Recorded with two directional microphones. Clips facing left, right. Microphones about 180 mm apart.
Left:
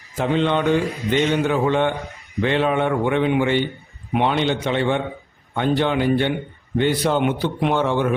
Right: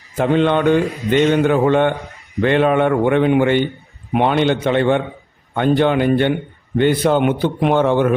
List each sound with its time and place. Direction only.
0.2 s a man's voice: 55° right (ahead or behind)